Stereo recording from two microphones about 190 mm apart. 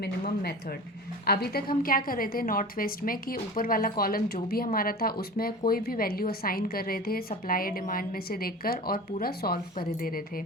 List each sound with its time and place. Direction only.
0.0 s a woman's voice: 55° left (ahead or behind)